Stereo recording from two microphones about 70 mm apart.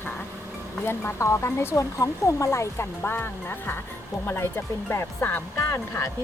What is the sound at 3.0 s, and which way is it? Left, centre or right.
Speech, left.